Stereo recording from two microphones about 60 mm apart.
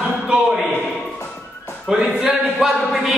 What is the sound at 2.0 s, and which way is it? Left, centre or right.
Speech, right.